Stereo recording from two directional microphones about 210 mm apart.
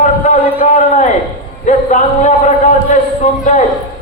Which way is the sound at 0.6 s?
35° left (ahead or behind).